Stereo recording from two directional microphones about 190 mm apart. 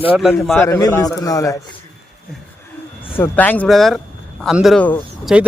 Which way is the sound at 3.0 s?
10° left (ahead or behind).